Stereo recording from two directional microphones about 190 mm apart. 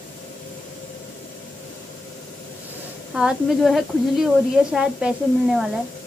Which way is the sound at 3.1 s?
Centre (ahead or behind).